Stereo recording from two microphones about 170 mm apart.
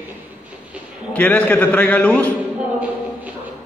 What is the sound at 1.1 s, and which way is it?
A man's voice, 10° left (ahead or behind).